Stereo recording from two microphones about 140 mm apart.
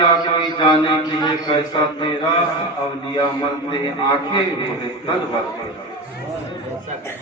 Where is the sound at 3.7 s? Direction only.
35° left (ahead or behind).